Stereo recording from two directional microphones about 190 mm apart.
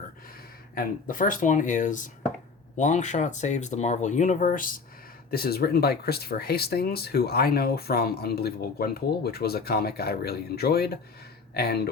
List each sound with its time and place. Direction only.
1.0 s speech: 45° left (ahead or behind)